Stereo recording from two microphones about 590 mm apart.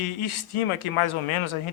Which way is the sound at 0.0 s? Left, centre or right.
Left.